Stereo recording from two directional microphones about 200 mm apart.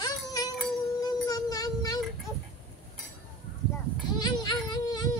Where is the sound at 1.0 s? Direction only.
20° left (ahead or behind).